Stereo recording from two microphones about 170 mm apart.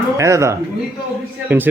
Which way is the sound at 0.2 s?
20° right (ahead or behind).